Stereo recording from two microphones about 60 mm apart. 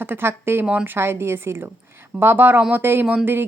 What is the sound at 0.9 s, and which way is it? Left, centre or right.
A woman's voice, right.